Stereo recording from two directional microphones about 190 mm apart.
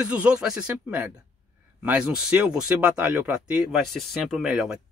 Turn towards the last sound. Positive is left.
turn(degrees=-5)  # may be behind; listen again after turning